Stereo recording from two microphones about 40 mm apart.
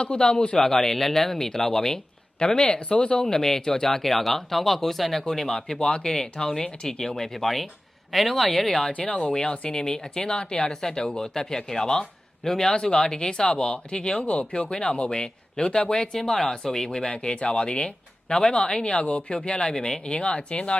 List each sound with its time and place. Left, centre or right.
0.0 s speech: left
6.8 s speech: centre
9.0 s speech: centre